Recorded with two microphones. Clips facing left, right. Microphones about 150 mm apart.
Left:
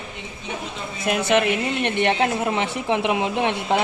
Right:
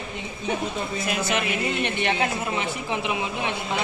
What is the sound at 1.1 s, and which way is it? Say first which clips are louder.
A woman's voice: left 9 dB; 60° left (ahead or behind).